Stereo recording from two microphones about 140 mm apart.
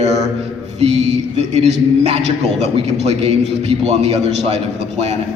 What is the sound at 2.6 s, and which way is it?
A man's voice, 50° right (ahead or behind).